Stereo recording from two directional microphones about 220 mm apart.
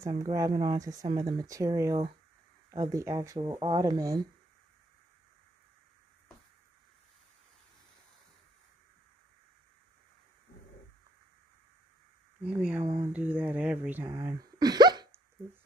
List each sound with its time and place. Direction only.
0.0 s speech: 15° right (ahead or behind)
12.4 s speech: 5° right (ahead or behind)